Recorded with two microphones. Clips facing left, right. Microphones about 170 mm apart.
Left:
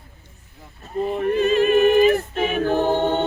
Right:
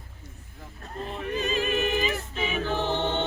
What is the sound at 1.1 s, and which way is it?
Choir, 55° left (ahead or behind).